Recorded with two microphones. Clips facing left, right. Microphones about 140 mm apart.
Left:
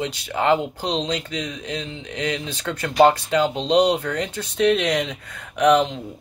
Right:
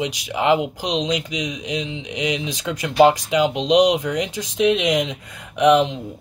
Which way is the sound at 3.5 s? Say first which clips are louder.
Right 3 dB; 30° left (ahead or behind).